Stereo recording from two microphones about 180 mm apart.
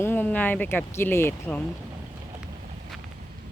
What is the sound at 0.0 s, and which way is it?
Speech, 10° left (ahead or behind).